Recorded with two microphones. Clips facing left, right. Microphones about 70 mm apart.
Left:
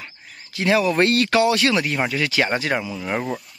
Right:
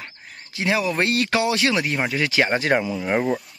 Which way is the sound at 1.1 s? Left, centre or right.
Centre.